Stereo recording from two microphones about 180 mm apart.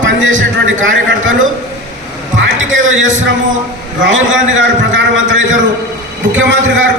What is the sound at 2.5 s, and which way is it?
Speech, 90° right.